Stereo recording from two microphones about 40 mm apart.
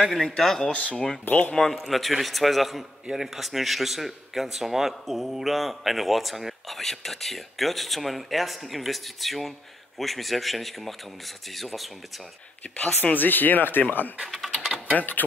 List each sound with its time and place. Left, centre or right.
0.1 s a man's voice: centre
0.6 s speech: left
0.9 s speech: centre
1.2 s speech: left
1.6 s a man's voice: centre
13.0 s speech: left